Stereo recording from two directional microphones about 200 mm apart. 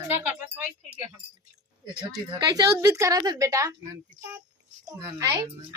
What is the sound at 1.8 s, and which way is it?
A woman's voice, 20° right (ahead or behind).